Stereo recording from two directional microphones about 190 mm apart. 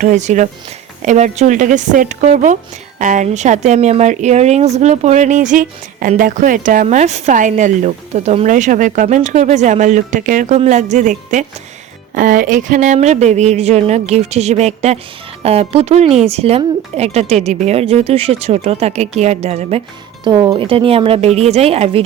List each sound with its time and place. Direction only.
0.0 s speech: 40° right (ahead or behind)